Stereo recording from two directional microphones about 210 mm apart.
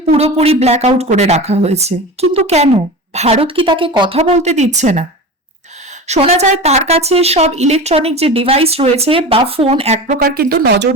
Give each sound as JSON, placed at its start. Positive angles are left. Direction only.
{"t": 0.0, "sound": "speech", "side_deg": -30}
{"t": 6.1, "sound": "speech", "side_deg": -30}
{"t": 10.2, "sound": "speech", "side_deg": -45}